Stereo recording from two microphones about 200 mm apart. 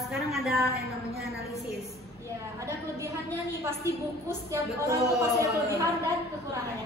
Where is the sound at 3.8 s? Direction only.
15° right (ahead or behind).